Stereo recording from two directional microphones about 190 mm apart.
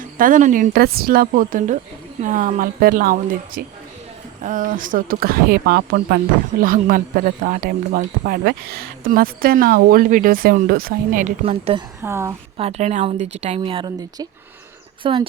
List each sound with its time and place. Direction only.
0.0 s speech: 45° right (ahead or behind)
6.6 s speech: 45° right (ahead or behind)
12.0 s a woman's voice: 15° right (ahead or behind)
12.5 s a woman's voice: 35° right (ahead or behind)